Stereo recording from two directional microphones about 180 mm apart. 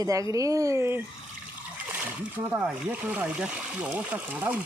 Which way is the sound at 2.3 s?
10° right (ahead or behind).